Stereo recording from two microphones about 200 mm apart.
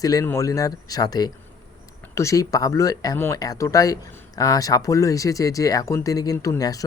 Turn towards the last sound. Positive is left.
turn(degrees=15)  # may be behind; listen again after turning